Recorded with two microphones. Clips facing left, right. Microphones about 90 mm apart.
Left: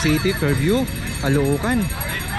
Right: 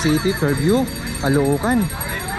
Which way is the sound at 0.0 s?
25° right (ahead or behind).